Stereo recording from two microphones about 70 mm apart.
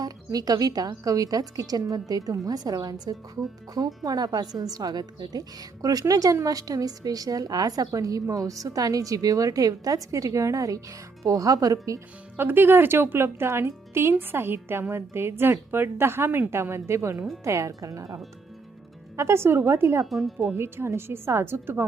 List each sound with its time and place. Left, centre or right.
0.0 s speech: right
12.4 s speech: right
19.1 s speech: right
20.1 s speech: centre
20.6 s speech: right